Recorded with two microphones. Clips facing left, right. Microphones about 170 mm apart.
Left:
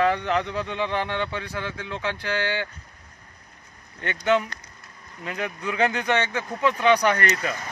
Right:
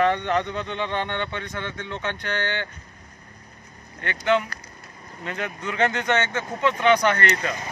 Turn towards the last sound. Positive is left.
turn(degrees=10)  # may be behind; listen again after turning